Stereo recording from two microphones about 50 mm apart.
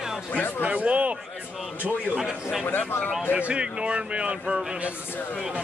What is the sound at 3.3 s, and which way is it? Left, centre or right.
Speech, right.